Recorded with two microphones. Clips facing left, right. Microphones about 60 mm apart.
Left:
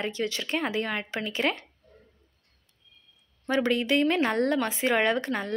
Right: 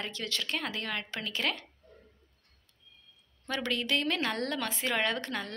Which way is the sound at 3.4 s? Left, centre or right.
Left.